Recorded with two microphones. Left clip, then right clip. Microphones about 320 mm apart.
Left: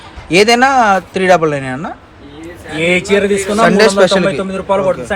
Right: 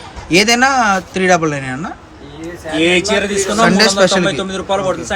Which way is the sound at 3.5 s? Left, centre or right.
Centre.